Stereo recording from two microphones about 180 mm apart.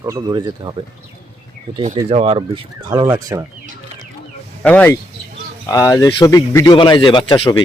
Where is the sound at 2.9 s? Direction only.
20° right (ahead or behind).